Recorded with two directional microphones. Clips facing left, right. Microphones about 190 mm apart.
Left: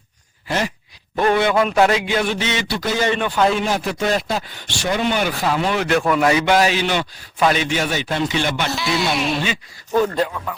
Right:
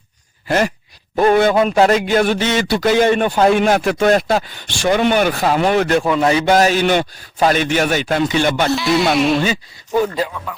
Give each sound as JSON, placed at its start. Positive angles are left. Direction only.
{"t": 0.4, "sound": "sigh", "side_deg": -50}
{"t": 1.1, "sound": "a sound", "side_deg": -40}
{"t": 1.6, "sound": "a man's voice", "side_deg": -35}
{"t": 2.0, "sound": "a man's voice", "side_deg": -45}
{"t": 3.5, "sound": "a man's voice", "side_deg": -65}
{"t": 6.1, "sound": "a man's voice", "side_deg": -30}
{"t": 8.7, "sound": "music", "side_deg": 0}
{"t": 9.9, "sound": "speech", "side_deg": -10}